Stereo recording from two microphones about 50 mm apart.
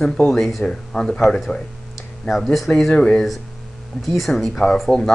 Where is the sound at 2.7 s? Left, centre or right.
Left.